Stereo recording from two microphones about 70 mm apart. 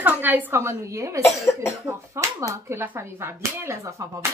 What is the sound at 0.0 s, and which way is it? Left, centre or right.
Speech, right.